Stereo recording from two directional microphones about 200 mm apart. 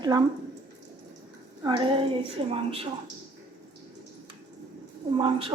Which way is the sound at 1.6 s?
25° right (ahead or behind).